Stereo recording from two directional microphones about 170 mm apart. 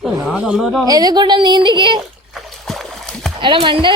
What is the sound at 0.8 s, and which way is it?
Speech, 25° right (ahead or behind).